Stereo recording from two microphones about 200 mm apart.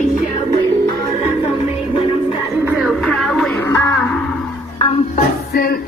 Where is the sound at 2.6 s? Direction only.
5° right (ahead or behind).